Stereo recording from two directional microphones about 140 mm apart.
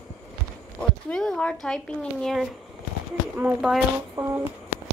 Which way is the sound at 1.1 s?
5° left (ahead or behind).